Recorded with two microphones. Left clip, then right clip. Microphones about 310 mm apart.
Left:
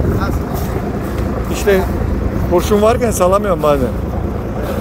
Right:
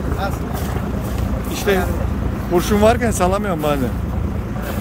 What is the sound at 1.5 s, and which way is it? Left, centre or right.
Speech, centre.